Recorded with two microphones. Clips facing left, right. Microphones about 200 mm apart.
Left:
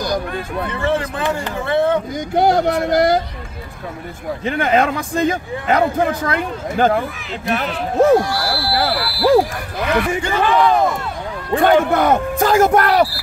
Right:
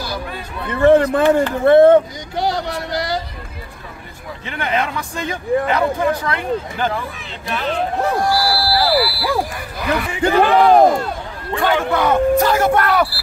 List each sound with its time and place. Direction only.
0.7 s speech: 55° right (ahead or behind)
2.1 s speech: 50° left (ahead or behind)
4.5 s speech: 45° left (ahead or behind)
8.2 s speech: centre (ahead or behind)
10.2 s speech: 45° right (ahead or behind)
11.5 s speech: 50° left (ahead or behind); by 13.1 s 35° left (ahead or behind)